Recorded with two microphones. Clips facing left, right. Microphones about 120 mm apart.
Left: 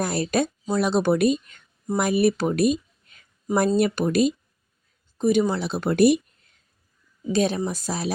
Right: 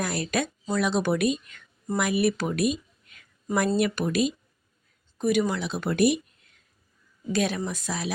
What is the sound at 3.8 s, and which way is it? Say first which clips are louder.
Speech: left 4 dB; 35° left (ahead or behind).